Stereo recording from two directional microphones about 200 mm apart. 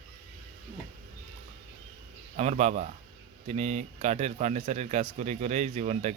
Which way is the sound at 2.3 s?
35° right (ahead or behind).